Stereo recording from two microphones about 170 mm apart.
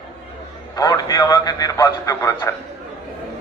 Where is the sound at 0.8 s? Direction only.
20° left (ahead or behind).